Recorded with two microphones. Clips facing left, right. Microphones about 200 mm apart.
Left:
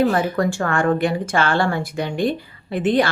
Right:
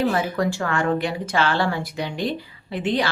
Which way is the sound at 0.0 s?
50° left (ahead or behind).